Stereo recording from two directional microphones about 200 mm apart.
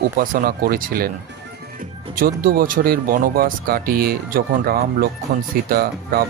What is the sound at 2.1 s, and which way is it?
Speech, 45° right (ahead or behind).